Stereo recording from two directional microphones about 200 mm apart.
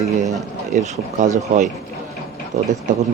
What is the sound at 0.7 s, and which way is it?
Speech, 35° right (ahead or behind).